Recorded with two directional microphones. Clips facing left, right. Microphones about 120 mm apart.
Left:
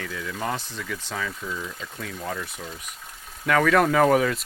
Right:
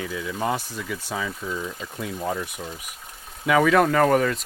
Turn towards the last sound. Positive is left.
turn(degrees=0)  # may be behind; listen again after turning